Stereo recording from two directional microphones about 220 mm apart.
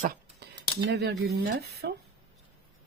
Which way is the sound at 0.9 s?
50° right (ahead or behind).